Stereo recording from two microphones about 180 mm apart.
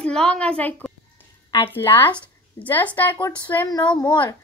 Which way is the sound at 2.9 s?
10° left (ahead or behind).